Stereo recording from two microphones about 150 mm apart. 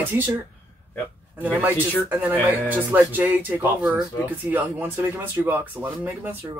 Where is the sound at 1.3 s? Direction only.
10° right (ahead or behind).